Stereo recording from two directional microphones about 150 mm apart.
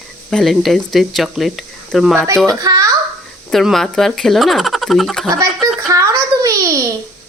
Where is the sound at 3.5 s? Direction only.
Centre (ahead or behind).